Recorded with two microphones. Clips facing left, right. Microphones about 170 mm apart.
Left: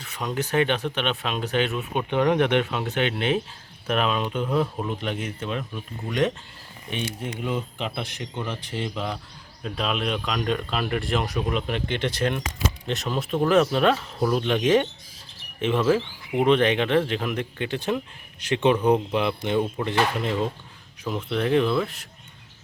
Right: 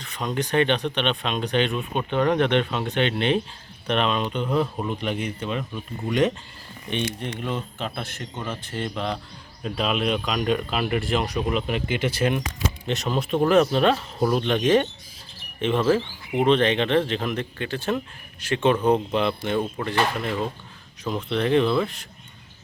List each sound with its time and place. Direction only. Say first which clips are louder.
0.0 s speech: right 1 dB; 5° left (ahead or behind)
9.6 s speech: right 3 dB; centre (ahead or behind); by 20.3 s 20° left (ahead or behind)
21.0 s speech: right 1 dB; 5° left (ahead or behind)